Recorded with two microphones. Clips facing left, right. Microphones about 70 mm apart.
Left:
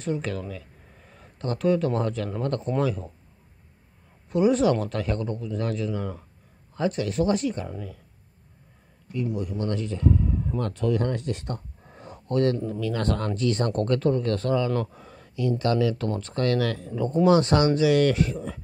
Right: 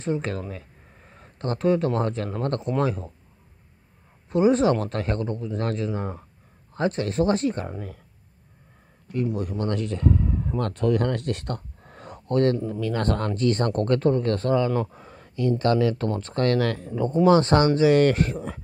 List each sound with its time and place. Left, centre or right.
0.0 s speech: right
4.3 s speech: right
5.6 s speech: right
9.1 s speech: right
12.3 s speech: right
14.9 s a sound: right
15.6 s speech: right